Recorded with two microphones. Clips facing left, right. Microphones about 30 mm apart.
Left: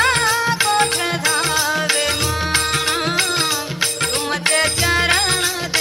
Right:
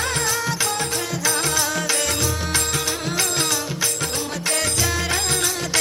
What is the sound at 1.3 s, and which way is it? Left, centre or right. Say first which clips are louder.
Music: left 4 dB; left.